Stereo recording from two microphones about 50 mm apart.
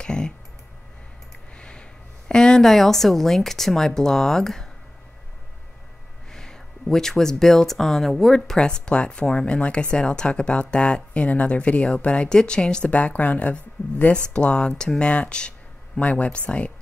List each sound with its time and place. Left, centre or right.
0.0 s clicking: centre
1.6 s a woman's voice: centre
6.3 s speech: centre; by 14.1 s left
14.1 s speech: left